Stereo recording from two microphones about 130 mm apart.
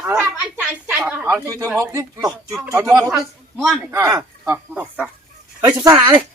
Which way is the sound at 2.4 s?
5° right (ahead or behind).